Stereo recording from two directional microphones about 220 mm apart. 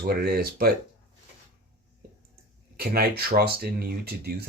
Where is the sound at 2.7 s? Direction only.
45° right (ahead or behind).